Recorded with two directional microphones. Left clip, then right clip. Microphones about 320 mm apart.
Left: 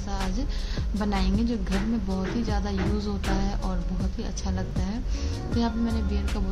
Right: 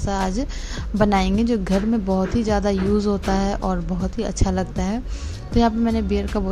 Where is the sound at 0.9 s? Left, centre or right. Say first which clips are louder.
Right 10 dB; right.